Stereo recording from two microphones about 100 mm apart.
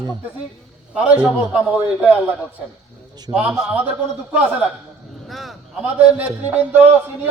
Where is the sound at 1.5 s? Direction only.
5° right (ahead or behind).